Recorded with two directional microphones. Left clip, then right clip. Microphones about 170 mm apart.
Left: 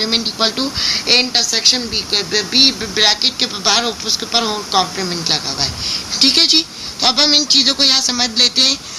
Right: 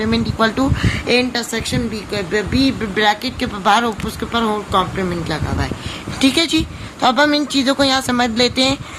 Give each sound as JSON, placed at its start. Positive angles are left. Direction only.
{"t": 0.0, "sound": "speech", "side_deg": -35}
{"t": 6.1, "sound": "speech", "side_deg": -45}